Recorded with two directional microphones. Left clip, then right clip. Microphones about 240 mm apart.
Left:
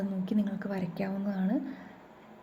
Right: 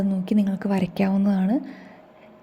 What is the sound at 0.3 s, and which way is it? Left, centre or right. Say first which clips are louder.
A woman's voice: right 9 dB; right.